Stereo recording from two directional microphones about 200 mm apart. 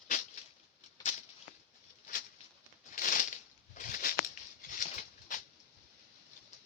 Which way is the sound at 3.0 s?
40° left (ahead or behind).